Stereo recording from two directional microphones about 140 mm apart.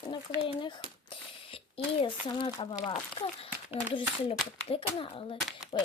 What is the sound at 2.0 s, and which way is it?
A child's voice, 35° left (ahead or behind).